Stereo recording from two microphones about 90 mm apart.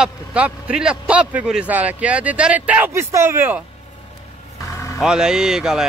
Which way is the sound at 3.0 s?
30° right (ahead or behind).